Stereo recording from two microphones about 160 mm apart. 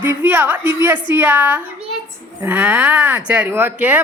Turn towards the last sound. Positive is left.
turn(degrees=-10)  # may be behind; listen again after turning